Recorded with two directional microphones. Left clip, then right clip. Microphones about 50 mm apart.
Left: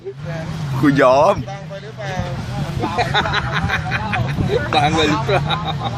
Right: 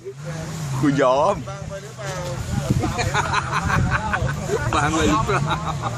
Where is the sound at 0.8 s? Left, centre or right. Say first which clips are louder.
Left 5 dB; centre.